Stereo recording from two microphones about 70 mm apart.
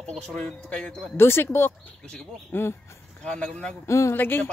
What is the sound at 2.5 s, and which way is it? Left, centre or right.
Speech, left.